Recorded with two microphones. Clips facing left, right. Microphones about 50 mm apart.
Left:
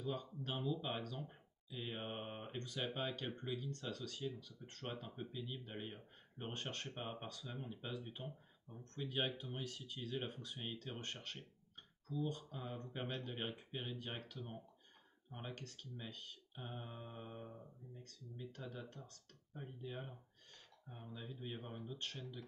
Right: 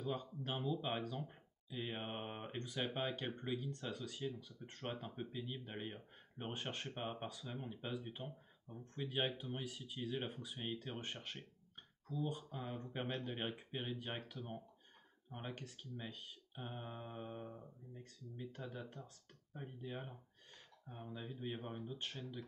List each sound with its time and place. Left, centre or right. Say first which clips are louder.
0.0 s speech: right 1 dB; centre
12.2 s speech: even; centre